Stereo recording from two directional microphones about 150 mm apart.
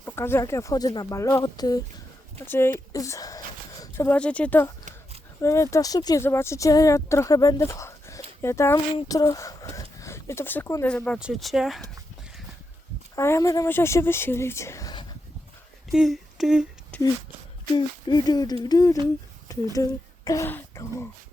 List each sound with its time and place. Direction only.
0.0 s speech: 15° left (ahead or behind)
2.5 s speech: 15° left (ahead or behind); by 11.8 s centre (ahead or behind)
13.1 s speech: 20° left (ahead or behind)
15.9 s a sound: centre (ahead or behind)
16.9 s a sound: 10° left (ahead or behind)
17.7 s speech: 25° left (ahead or behind)